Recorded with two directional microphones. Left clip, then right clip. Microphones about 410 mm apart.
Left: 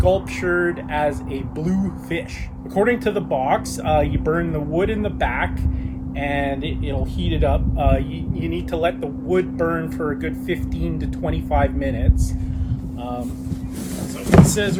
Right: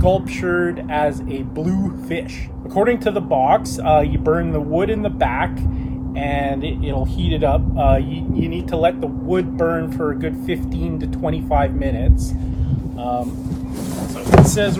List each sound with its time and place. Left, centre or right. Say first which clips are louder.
0.0 s speech: right 1 dB; centre
14.3 s speech: right 3 dB; centre